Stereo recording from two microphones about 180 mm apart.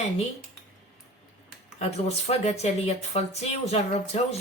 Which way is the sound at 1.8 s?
35° left (ahead or behind).